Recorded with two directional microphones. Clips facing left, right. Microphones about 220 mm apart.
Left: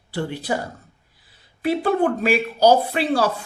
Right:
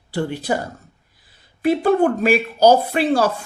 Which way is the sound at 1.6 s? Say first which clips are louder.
Right 4 dB; 45° right (ahead or behind).